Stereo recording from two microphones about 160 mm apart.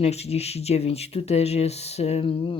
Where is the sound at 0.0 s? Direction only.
40° left (ahead or behind).